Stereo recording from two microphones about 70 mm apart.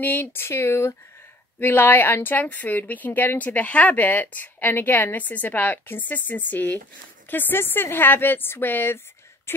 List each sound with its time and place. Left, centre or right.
0.0 s speech: left
1.6 s a woman's voice: left